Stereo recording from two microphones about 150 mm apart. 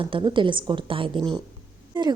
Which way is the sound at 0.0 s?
35° right (ahead or behind).